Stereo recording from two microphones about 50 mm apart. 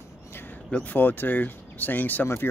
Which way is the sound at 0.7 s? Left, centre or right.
Left.